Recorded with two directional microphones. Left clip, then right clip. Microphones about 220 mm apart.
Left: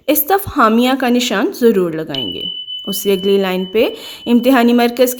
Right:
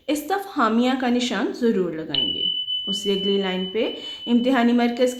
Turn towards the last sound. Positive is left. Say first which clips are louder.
# left 8 dB
turn(degrees=45)  # may be behind; listen again after turning